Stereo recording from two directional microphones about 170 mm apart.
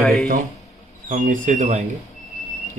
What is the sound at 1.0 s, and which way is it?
Speech, 45° right (ahead or behind).